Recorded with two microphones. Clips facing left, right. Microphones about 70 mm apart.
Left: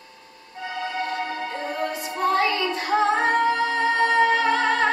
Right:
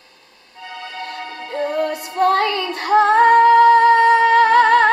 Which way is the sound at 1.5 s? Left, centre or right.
Right.